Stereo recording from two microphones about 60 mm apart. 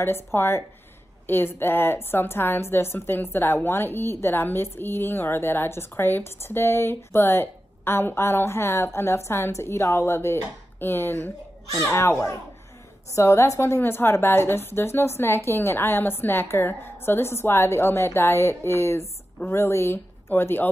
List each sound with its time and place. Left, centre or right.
0.0 s a woman's voice: left